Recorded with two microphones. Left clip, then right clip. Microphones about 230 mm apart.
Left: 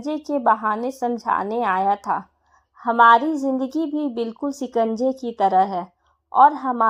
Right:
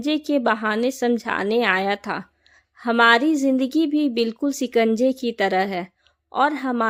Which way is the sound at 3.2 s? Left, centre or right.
Right.